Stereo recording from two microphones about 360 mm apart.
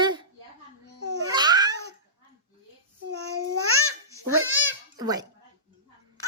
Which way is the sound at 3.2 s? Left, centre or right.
Right.